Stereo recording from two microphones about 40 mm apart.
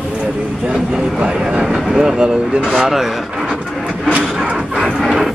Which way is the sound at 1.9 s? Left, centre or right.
Centre.